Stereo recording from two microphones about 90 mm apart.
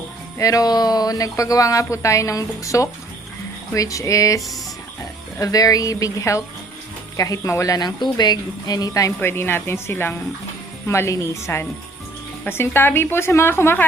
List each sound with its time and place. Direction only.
0.3 s speech: 40° left (ahead or behind)
5.4 s speech: 40° left (ahead or behind)
9.2 s a woman's voice: 25° left (ahead or behind)